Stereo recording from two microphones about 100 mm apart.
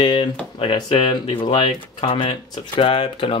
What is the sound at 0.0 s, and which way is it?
Speech, 55° left (ahead or behind).